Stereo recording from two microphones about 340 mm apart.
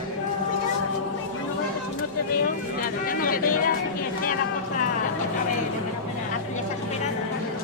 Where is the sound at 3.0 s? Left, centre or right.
Left.